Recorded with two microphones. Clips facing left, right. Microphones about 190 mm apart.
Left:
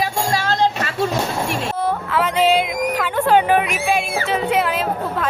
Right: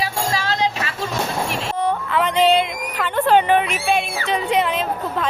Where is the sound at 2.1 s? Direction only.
5° left (ahead or behind).